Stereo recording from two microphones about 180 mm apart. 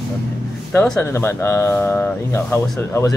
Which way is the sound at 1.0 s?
15° left (ahead or behind).